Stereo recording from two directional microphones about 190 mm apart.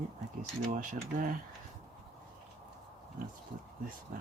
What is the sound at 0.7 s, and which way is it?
Speech, 45° right (ahead or behind).